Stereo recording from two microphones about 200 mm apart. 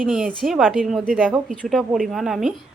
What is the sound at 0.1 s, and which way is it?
A woman's voice, 5° right (ahead or behind).